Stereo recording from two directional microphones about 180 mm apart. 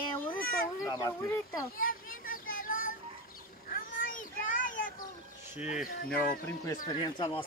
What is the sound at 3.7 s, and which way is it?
Children playing, 50° left (ahead or behind).